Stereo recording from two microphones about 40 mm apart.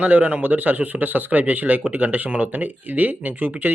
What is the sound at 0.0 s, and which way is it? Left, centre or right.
A man's voice, right.